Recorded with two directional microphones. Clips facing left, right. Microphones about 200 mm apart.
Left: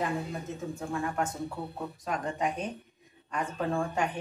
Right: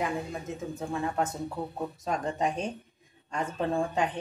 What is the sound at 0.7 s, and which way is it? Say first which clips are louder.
A woman's voice: right 2 dB; 20° right (ahead or behind).